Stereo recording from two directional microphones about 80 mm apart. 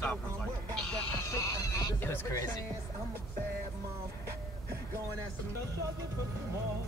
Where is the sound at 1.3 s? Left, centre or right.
Left.